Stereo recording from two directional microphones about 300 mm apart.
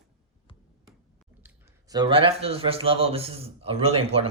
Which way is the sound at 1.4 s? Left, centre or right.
Centre.